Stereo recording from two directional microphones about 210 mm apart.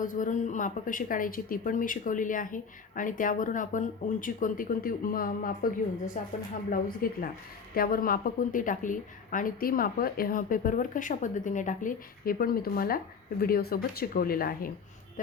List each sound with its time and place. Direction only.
0.0 s a woman's voice: 40° left (ahead or behind)